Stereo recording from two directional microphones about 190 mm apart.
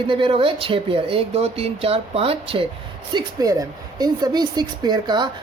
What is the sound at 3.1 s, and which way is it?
Speech, 20° right (ahead or behind).